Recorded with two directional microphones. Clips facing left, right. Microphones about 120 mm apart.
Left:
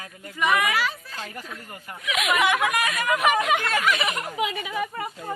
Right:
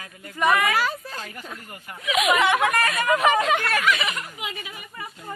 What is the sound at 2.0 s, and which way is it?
Speech, centre (ahead or behind).